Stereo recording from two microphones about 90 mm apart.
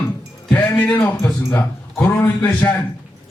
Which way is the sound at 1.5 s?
25° left (ahead or behind).